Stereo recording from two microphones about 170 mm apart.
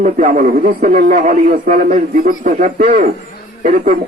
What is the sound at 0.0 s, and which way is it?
Speech, 45° right (ahead or behind).